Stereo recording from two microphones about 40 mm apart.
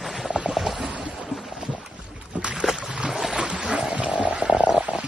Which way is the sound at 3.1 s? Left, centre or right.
Centre.